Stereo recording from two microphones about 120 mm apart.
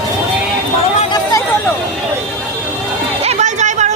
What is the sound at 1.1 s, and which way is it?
Chatter, 30° left (ahead or behind).